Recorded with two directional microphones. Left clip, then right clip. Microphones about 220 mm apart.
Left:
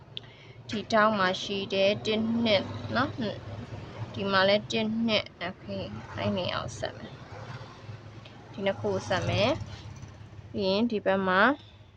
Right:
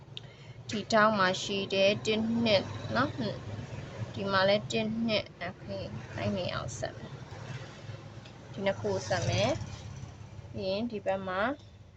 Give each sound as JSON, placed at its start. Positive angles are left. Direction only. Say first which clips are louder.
{"t": 0.7, "sound": "a woman's voice", "louder": "left 1 dB", "side_deg": 0}
{"t": 8.5, "sound": "speech", "louder": "left 2 dB", "side_deg": 5}
{"t": 10.6, "sound": "a woman's voice", "louder": "left 6 dB", "side_deg": 25}